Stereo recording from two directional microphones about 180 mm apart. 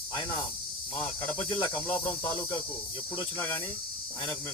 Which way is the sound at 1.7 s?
10° left (ahead or behind).